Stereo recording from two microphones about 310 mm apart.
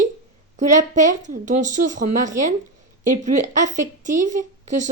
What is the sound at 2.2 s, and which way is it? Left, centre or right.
Speech, right.